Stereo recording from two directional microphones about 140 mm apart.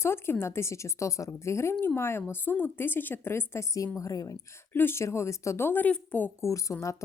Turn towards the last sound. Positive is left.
turn(degrees=20)  # may be behind; listen again after turning